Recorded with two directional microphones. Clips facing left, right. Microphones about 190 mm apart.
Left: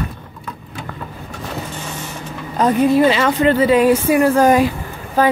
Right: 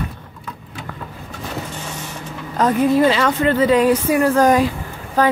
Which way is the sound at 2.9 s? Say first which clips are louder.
Left 1 dB; 10° left (ahead or behind).